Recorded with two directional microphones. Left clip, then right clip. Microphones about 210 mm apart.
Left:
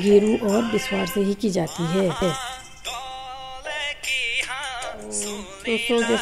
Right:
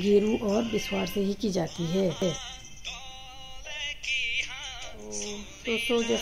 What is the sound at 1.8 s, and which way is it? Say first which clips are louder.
Speech: left 6 dB; 35° left (ahead or behind).